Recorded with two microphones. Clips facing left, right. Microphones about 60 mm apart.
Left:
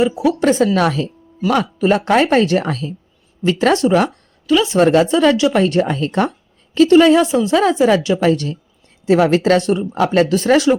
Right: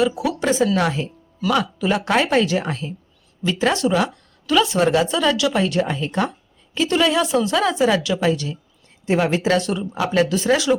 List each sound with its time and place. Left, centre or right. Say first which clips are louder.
0.0 s speech: left 5 dB; left
0.8 s speech: left 4 dB; left
1.5 s speech: left 5 dB; left
2.6 s speech: left 4 dB; left
3.4 s speech: left 5 dB; left
6.9 s speech: left 7 dB; left
8.2 s speech: left 5 dB; left
9.0 s speech: left 6 dB; left
9.6 s speech: left 6 dB; left
9.9 s speech: left 4 dB; left